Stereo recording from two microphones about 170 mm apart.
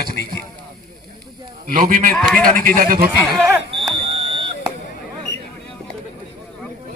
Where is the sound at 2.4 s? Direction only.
55° right (ahead or behind).